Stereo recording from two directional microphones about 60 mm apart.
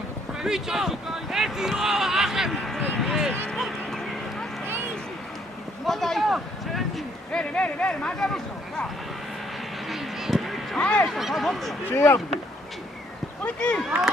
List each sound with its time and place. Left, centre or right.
0.4 s speech: centre
3.5 s a sound: centre
5.8 s speech: centre
7.3 s speech: centre
9.9 s a sound: centre
10.8 s speech: centre
11.1 s speech: centre
11.9 s speech: left
13.4 s speech: left